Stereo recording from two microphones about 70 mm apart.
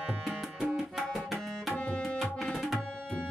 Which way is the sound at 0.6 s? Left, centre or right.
Centre.